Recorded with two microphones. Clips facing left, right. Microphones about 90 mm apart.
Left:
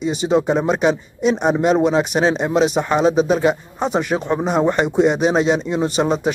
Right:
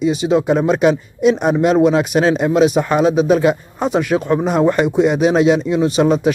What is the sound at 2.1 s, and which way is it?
Speech, 15° left (ahead or behind).